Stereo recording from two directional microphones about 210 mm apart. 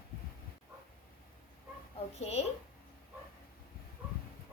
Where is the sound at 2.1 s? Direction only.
30° left (ahead or behind).